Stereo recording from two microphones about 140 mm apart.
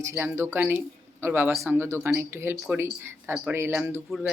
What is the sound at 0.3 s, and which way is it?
Speech, 20° right (ahead or behind).